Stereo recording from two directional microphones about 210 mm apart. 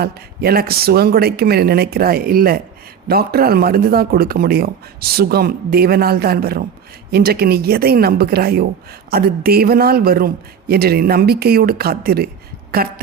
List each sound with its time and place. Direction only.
0.0 s speech: 45° right (ahead or behind)